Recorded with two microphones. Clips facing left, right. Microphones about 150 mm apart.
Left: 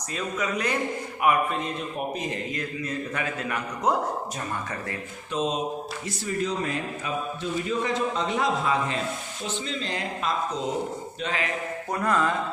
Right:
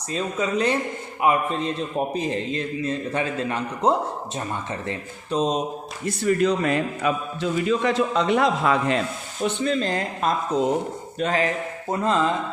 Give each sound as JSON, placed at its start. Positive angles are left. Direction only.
{"t": 0.1, "sound": "a man's voice", "side_deg": -30}
{"t": 5.3, "sound": "speech", "side_deg": -35}
{"t": 6.1, "sound": "a man's voice", "side_deg": -70}
{"t": 9.4, "sound": "speech", "side_deg": -55}
{"t": 11.9, "sound": "a man's voice", "side_deg": -25}